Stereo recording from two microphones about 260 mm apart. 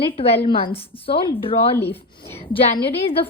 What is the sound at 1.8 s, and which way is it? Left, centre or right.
Speech, centre.